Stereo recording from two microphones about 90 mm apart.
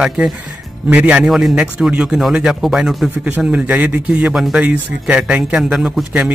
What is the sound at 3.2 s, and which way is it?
A man's voice, 15° right (ahead or behind).